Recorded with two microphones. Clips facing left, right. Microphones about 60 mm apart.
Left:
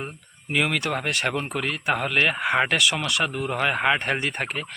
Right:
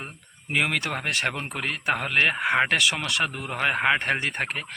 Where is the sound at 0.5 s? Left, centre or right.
Right.